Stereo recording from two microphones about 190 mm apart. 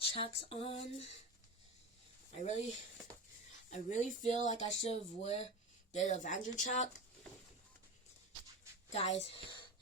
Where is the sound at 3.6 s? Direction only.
40° left (ahead or behind).